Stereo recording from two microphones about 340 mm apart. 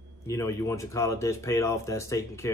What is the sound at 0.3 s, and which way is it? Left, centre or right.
Speech, centre.